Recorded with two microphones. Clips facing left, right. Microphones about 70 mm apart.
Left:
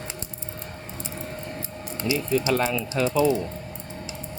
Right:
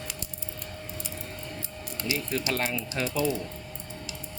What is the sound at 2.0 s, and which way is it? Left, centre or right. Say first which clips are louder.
Speech: left 7 dB; left.